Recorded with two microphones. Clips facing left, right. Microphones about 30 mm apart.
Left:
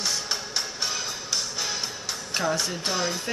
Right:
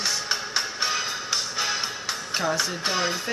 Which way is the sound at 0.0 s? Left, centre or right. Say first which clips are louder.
Right 2 dB; centre.